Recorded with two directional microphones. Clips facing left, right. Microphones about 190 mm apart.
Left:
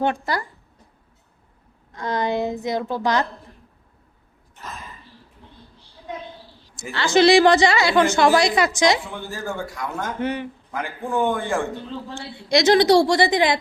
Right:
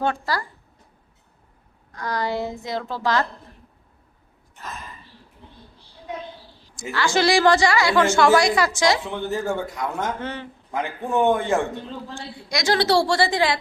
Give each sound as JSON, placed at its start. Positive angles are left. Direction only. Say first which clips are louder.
{"t": 0.0, "sound": "a woman's voice", "louder": "left 2 dB", "side_deg": 20}
{"t": 1.9, "sound": "a woman's voice", "louder": "left 3 dB", "side_deg": 20}
{"t": 6.9, "sound": "a woman's voice", "louder": "left 5 dB", "side_deg": 20}
{"t": 9.0, "sound": "a man's voice", "louder": "right 5 dB", "side_deg": -20}
{"t": 10.2, "sound": "speech", "louder": "left 6 dB", "side_deg": 15}
{"t": 10.7, "sound": "a man's voice", "louder": "right 3 dB", "side_deg": -20}
{"t": 12.1, "sound": "a woman's voice", "louder": "left 11 dB", "side_deg": 25}